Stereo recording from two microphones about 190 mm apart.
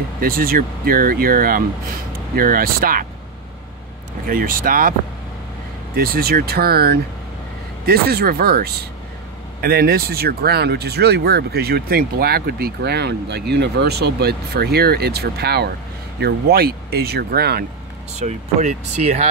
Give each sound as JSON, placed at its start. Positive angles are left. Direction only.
{"t": 0.2, "sound": "speech", "side_deg": -50}
{"t": 4.3, "sound": "speech", "side_deg": -45}
{"t": 5.9, "sound": "speech", "side_deg": -50}
{"t": 18.1, "sound": "speech", "side_deg": -35}